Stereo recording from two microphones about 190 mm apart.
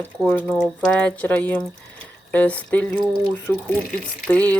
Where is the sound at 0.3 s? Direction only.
10° left (ahead or behind).